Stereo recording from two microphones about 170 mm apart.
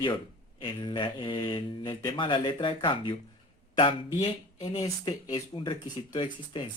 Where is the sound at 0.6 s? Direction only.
30° left (ahead or behind).